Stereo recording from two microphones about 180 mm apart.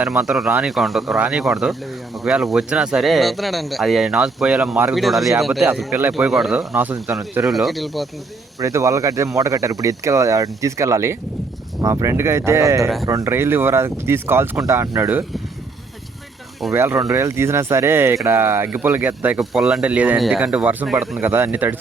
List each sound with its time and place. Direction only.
0.0 s speech: 5° right (ahead or behind)
7.4 s speech: centre (ahead or behind)
8.5 s speech: 15° right (ahead or behind)
16.7 s speech: 15° right (ahead or behind)